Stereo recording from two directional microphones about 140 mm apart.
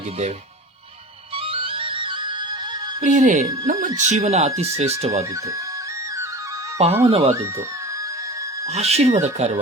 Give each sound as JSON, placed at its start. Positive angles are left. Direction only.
{"t": 1.5, "sound": "music", "side_deg": -40}
{"t": 3.0, "sound": "speech", "side_deg": -60}
{"t": 6.7, "sound": "speech", "side_deg": -45}
{"t": 8.6, "sound": "speech", "side_deg": -50}